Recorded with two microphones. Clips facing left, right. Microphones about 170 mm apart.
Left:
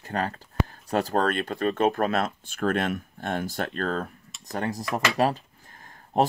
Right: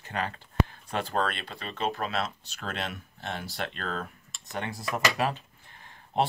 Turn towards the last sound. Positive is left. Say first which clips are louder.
# left 4 dB
turn(degrees=45)  # may be behind; listen again after turning